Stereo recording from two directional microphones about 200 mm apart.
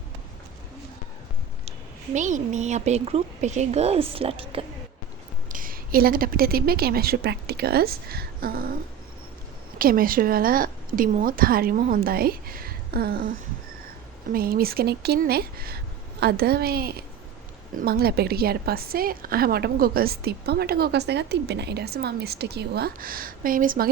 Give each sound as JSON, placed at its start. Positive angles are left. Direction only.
{"t": 2.1, "sound": "a woman's voice", "side_deg": -35}
{"t": 5.5, "sound": "a woman's voice", "side_deg": -45}
{"t": 9.7, "sound": "a woman's voice", "side_deg": -45}
{"t": 14.3, "sound": "a woman's voice", "side_deg": -45}